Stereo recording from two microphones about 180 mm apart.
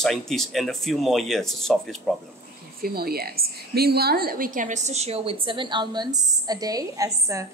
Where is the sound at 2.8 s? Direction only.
60° right (ahead or behind).